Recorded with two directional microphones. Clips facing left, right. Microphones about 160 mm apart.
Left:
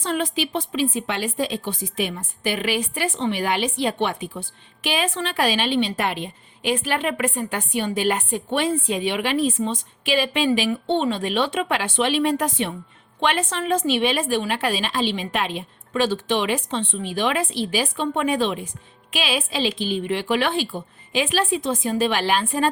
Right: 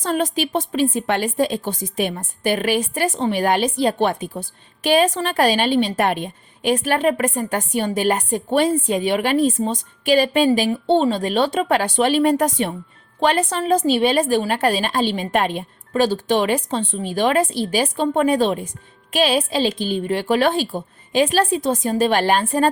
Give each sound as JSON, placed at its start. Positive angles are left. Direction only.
{"t": 0.0, "sound": "a woman's voice", "side_deg": -45}